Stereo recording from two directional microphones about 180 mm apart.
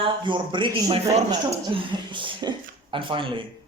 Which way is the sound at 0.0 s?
25° right (ahead or behind).